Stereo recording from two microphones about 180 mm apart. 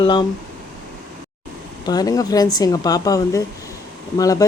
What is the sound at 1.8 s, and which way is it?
Speech, 20° left (ahead or behind).